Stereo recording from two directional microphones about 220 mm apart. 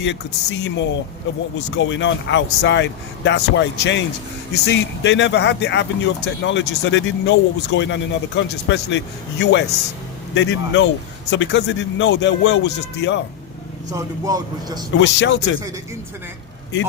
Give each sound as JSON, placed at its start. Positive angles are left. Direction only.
{"t": 0.0, "sound": "speech", "side_deg": 55}
{"t": 13.9, "sound": "speech", "side_deg": -15}
{"t": 14.9, "sound": "speech", "side_deg": 55}